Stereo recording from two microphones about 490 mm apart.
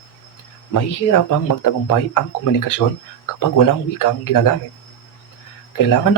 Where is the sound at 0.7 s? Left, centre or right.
Left.